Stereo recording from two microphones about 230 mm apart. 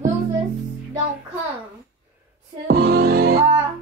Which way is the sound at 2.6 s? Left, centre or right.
Right.